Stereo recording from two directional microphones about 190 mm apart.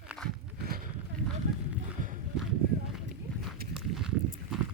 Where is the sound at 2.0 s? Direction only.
45° right (ahead or behind).